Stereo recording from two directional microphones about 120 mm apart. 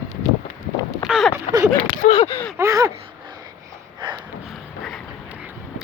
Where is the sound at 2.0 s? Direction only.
90° left.